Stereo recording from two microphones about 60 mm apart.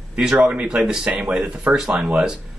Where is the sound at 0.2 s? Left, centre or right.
Centre.